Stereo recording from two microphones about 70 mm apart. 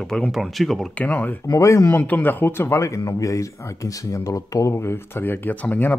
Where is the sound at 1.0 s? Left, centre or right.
Left.